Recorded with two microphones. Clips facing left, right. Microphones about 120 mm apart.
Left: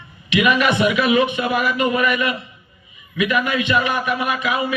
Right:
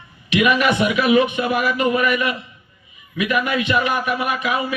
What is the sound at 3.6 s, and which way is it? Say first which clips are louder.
Speech: even; 25° left (ahead or behind).